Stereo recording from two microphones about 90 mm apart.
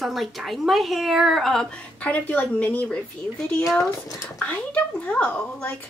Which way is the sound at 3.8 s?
40° left (ahead or behind).